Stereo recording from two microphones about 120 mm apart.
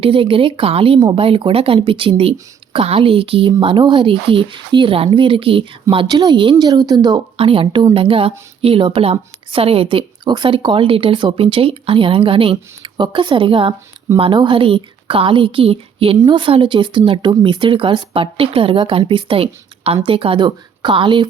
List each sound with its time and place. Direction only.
0.0 s a woman's voice: 50° right (ahead or behind)
6.1 s a woman's voice: 35° right (ahead or behind)
7.3 s a woman's voice: 50° right (ahead or behind)